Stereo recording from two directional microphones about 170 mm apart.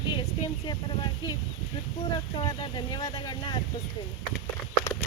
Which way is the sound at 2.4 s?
25° left (ahead or behind).